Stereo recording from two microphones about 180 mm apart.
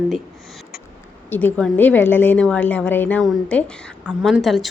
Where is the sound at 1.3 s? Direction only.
10° left (ahead or behind).